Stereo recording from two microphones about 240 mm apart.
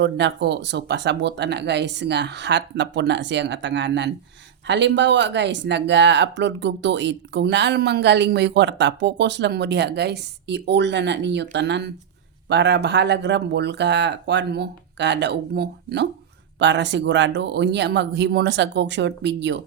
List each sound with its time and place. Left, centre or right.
0.0 s speech: right